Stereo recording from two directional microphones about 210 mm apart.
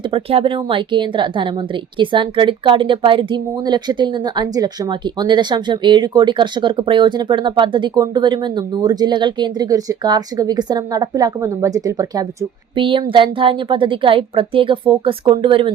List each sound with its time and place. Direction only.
0.1 s a woman's voice: 25° right (ahead or behind)